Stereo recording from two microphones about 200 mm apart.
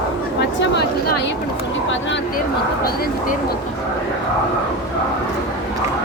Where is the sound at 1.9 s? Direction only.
70° left (ahead or behind).